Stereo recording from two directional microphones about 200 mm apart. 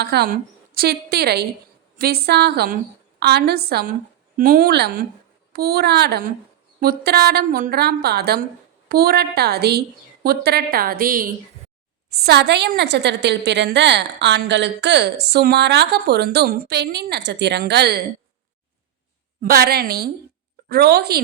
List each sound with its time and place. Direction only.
0.0 s a woman's voice: 55° right (ahead or behind)
12.1 s a woman's voice: 55° right (ahead or behind)
19.4 s a woman's voice: 50° right (ahead or behind)